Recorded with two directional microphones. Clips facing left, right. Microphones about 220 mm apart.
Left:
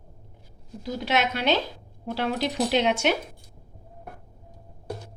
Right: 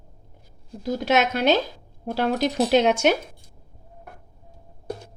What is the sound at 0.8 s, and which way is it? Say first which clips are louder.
Speech: right 5 dB; 45° right (ahead or behind).